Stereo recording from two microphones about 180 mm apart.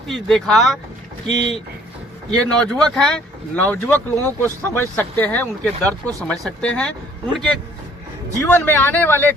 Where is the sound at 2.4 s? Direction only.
5° left (ahead or behind).